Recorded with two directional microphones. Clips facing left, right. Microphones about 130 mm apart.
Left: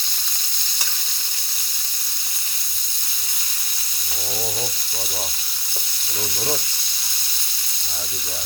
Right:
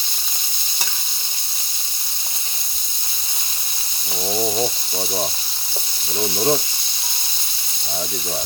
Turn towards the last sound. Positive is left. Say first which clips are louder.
# right 8 dB
turn(degrees=-30)  # may be behind; listen again after turning